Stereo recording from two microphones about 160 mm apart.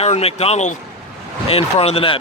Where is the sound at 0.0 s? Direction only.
40° left (ahead or behind).